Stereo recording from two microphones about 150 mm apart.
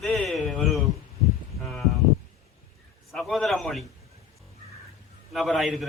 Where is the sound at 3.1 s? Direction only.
Centre (ahead or behind).